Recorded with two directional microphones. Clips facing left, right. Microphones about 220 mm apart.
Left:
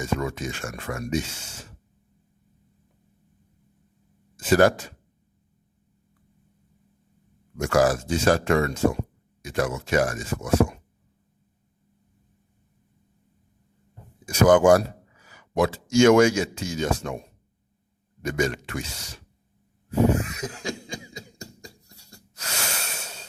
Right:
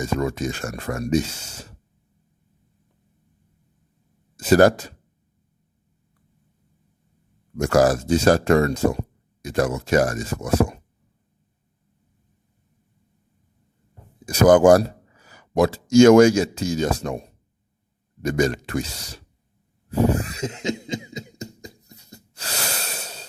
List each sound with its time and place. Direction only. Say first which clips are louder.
0.0 s speech: right 4 dB; 40° right (ahead or behind)
4.4 s speech: right 4 dB; 40° right (ahead or behind)
7.5 s speech: right 3 dB; 40° right (ahead or behind)
14.3 s a man's voice: right 3 dB; 35° right (ahead or behind)
19.9 s cough: right 1 dB; 35° right (ahead or behind); by 22.2 s 20° right (ahead or behind)
22.4 s breathing: right 3 dB; 35° right (ahead or behind)